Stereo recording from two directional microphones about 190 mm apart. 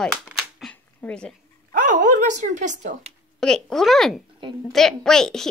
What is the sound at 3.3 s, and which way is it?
A woman's voice, centre (ahead or behind).